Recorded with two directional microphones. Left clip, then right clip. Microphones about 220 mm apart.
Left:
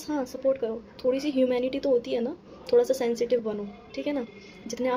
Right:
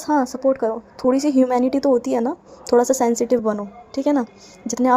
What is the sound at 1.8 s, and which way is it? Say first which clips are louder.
A woman's voice: right 7 dB; 35° right (ahead or behind).